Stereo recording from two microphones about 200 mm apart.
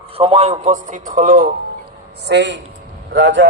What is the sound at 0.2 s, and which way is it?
A man's voice, 30° right (ahead or behind).